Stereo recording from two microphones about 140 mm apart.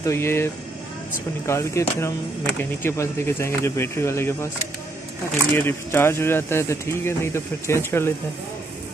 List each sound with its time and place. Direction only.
0.0 s speech: 20° left (ahead or behind)
5.6 s speech: 15° left (ahead or behind)